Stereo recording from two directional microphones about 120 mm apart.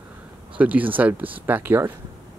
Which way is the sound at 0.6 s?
15° right (ahead or behind).